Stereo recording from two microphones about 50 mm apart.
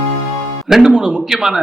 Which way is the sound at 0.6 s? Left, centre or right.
Centre.